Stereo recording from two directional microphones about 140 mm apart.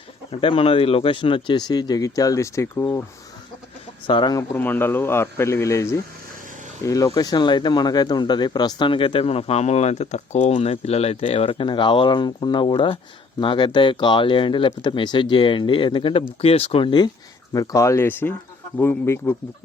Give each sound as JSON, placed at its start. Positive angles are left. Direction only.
{"t": 0.3, "sound": "speech", "side_deg": 40}
{"t": 4.0, "sound": "speech", "side_deg": 35}
{"t": 4.5, "sound": "a man's voice", "side_deg": 15}